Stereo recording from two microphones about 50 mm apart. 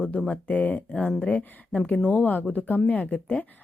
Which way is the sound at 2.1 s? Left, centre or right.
Left.